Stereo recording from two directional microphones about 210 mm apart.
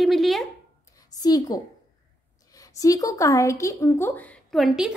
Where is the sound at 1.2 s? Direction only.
20° left (ahead or behind).